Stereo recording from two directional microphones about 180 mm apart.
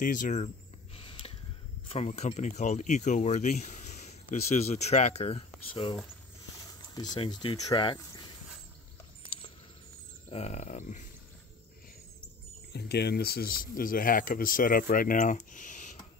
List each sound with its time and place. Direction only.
0.0 s speech: 45° left (ahead or behind)
0.9 s a sound: 30° left (ahead or behind)
1.9 s speech: 40° left (ahead or behind)
6.9 s speech: 25° left (ahead or behind)
10.3 s speech: 40° left (ahead or behind)
12.7 s speech: 65° left (ahead or behind); by 15.9 s 45° left (ahead or behind)